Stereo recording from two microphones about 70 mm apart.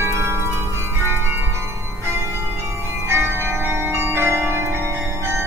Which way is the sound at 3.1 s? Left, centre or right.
Right.